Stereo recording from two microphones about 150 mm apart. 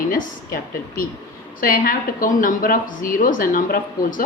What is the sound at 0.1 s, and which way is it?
A woman's voice, 75° left (ahead or behind).